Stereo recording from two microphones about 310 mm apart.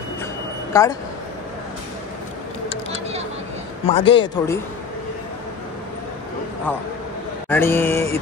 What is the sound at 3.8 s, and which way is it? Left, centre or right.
Speech, centre.